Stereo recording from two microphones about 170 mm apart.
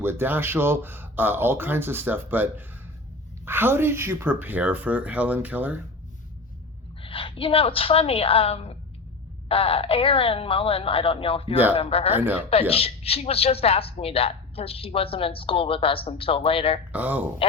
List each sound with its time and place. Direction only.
0.0 s speech: 15° right (ahead or behind)
7.0 s a woman's voice: 30° left (ahead or behind)
12.1 s speech: 10° right (ahead or behind)
12.5 s a woman's voice: 35° left (ahead or behind)
16.9 s speech: 10° right (ahead or behind)